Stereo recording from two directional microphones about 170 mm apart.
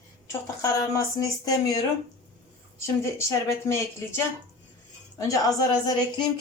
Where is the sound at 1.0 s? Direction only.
20° left (ahead or behind).